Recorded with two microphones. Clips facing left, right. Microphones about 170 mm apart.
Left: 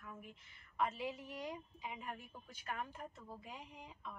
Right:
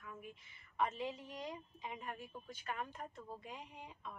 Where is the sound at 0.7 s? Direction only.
5° left (ahead or behind).